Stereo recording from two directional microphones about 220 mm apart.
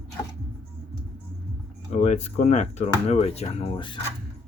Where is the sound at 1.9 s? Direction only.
30° left (ahead or behind).